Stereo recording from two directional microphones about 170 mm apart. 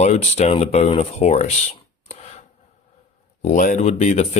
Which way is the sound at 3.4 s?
45° left (ahead or behind).